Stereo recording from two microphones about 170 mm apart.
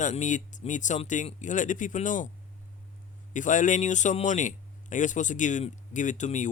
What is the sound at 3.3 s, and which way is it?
Speech, 50° left (ahead or behind).